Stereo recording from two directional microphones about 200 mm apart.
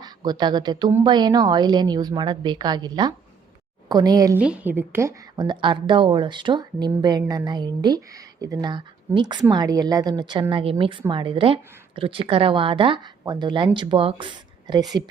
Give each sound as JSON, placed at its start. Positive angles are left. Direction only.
{"t": 0.0, "sound": "a woman's voice", "side_deg": -20}
{"t": 4.4, "sound": "a woman's voice", "side_deg": -5}